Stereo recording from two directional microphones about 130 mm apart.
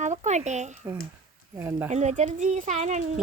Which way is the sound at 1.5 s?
20° right (ahead or behind).